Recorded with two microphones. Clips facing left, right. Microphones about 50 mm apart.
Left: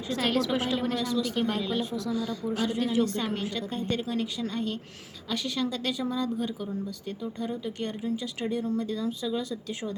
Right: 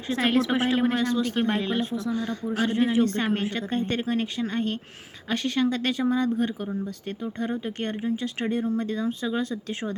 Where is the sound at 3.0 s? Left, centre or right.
Right.